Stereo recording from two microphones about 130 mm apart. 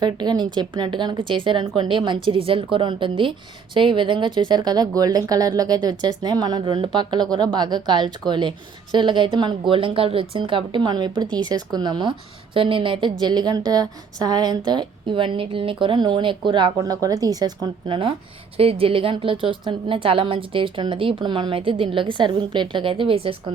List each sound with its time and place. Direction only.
0.0 s speech: 35° right (ahead or behind)